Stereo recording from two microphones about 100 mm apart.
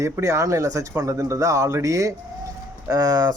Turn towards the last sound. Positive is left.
turn(degrees=-40)  # may be behind; listen again after turning